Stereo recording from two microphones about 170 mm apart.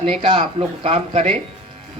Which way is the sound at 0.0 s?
35° right (ahead or behind).